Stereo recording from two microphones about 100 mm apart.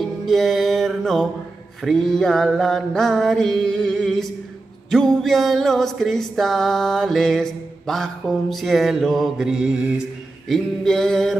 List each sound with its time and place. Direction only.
0.0 s music: centre (ahead or behind)